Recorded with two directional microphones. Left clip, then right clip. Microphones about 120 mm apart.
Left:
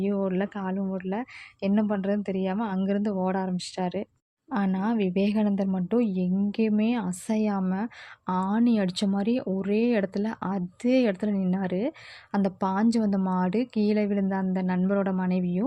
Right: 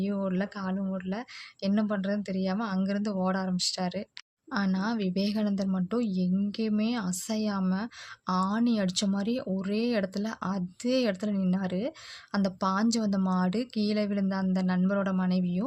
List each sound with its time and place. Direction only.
0.0 s speech: 25° left (ahead or behind)